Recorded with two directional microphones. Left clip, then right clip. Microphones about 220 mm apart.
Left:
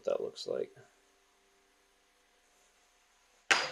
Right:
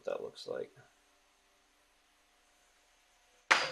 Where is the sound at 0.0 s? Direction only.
25° left (ahead or behind).